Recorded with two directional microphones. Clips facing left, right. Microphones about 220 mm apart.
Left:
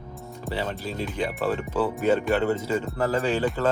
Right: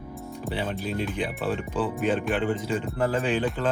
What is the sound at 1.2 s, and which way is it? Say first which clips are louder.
Speech: left 2 dB; 10° left (ahead or behind).